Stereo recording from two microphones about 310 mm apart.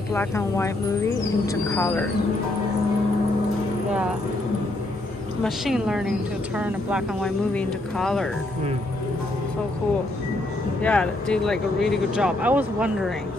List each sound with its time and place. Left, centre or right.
0.1 s speech: centre
5.4 s speech: centre
10.8 s speech: centre